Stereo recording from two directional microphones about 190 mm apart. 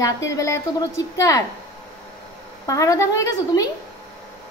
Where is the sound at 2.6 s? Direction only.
15° left (ahead or behind).